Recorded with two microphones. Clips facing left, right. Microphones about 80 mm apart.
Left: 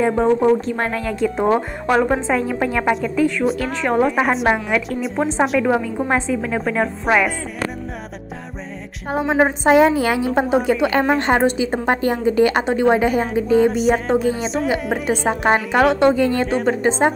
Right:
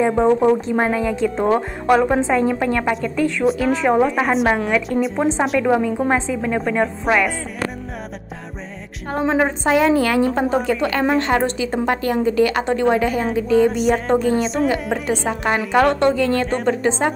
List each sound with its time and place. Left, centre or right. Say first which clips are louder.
0.0 s speech: right 1 dB; centre
9.1 s a woman's voice: left 1 dB; centre
9.7 s a woman's voice: left 2 dB; left
12.6 s a woman's voice: left 1 dB; centre
13.6 s speech: even; centre
15.0 s a woman's voice: left 4 dB; centre
15.7 s speech: right 3 dB; centre
16.0 s a woman's voice: left 1 dB; centre
16.4 s speech: left 1 dB; centre